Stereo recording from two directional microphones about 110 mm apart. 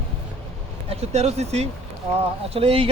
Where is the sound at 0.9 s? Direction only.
75° right (ahead or behind).